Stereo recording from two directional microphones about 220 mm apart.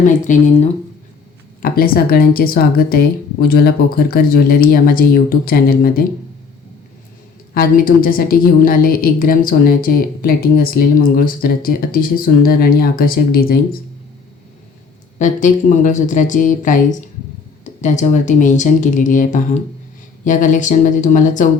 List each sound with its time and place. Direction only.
0.0 s a woman's voice: 35° left (ahead or behind)
7.5 s a woman's voice: 40° left (ahead or behind)
15.2 s a woman's voice: 35° left (ahead or behind)